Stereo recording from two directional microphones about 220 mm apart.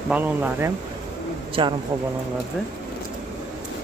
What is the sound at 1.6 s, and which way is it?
Speech, 20° right (ahead or behind).